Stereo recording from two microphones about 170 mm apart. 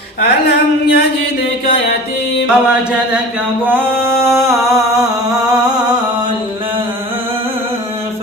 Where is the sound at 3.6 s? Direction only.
10° right (ahead or behind).